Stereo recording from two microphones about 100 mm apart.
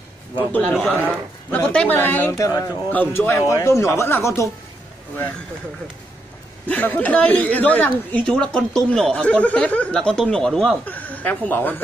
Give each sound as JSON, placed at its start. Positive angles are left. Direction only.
{"t": 0.7, "sound": "speech", "side_deg": 15}
{"t": 2.3, "sound": "speech", "side_deg": 35}
{"t": 2.9, "sound": "speech", "side_deg": 20}
{"t": 6.7, "sound": "speech", "side_deg": 15}
{"t": 10.9, "sound": "speech", "side_deg": 15}